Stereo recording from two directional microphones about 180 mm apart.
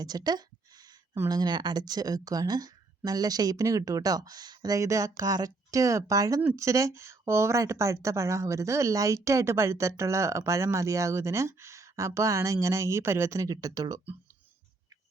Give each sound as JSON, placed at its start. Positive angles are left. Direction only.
{"t": 0.0, "sound": "speech", "side_deg": -20}